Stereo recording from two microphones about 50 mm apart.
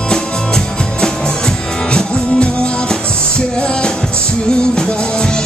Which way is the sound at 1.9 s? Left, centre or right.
Left.